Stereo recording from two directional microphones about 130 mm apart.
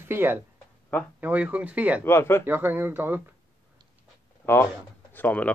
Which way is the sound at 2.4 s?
15° right (ahead or behind).